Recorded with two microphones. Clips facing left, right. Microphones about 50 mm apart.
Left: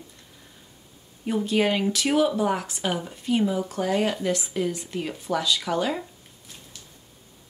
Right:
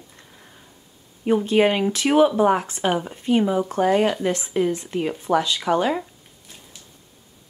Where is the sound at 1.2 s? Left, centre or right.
Right.